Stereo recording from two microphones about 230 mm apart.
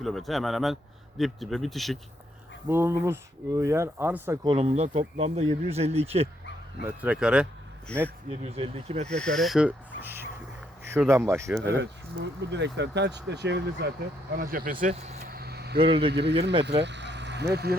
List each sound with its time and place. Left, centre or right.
0.0 s speech: centre
2.6 s speech: centre
4.4 s speech: right
6.8 s speech: centre
8.3 s speech: right
9.0 s speech: centre
11.8 s speech: right
15.4 s vehicle: right
15.8 s speech: right
16.6 s speech: right